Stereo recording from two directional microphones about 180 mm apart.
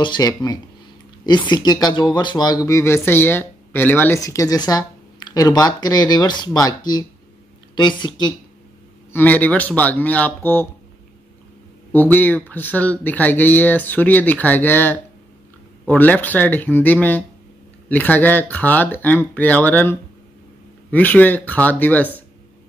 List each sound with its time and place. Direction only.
0.0 s speech: 25° left (ahead or behind)
9.1 s speech: 10° left (ahead or behind)
11.9 s speech: 10° left (ahead or behind)